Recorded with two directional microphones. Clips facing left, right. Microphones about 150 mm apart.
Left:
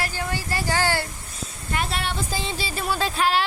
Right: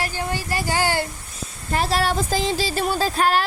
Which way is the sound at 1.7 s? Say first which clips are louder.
Right 7 dB; 35° right (ahead or behind).